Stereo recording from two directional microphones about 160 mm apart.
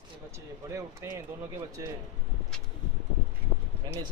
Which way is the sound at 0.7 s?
20° right (ahead or behind).